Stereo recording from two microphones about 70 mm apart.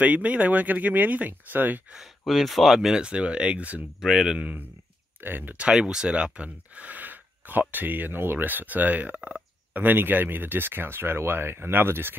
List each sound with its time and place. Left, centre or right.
0.0 s speech: centre
2.0 s speech: centre
4.0 s speech: centre
5.2 s speech: right
5.6 s speech: centre; by 12.2 s right